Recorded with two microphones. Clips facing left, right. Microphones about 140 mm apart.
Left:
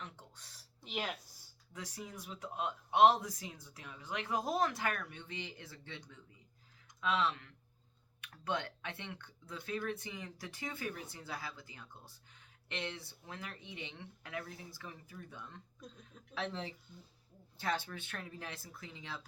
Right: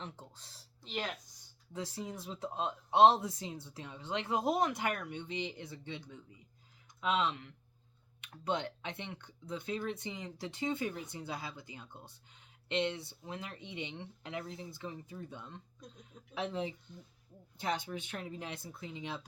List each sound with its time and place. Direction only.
0.0 s a sound: 30° right (ahead or behind)
0.8 s speech: 10° left (ahead or behind)
1.7 s speech: 30° right (ahead or behind)
7.0 s speech: 20° right (ahead or behind)